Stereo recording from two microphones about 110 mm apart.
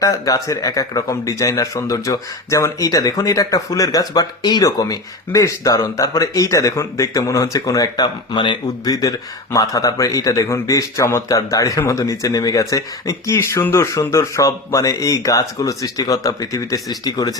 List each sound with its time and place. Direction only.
0.0 s a man's voice: 30° left (ahead or behind)